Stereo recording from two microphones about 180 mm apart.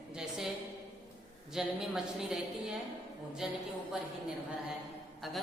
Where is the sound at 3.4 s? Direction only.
5° right (ahead or behind).